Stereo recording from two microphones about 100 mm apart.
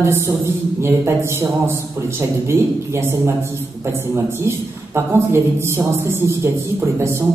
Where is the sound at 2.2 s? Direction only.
25° right (ahead or behind).